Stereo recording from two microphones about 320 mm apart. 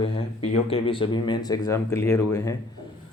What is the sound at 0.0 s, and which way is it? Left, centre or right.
Speech, centre.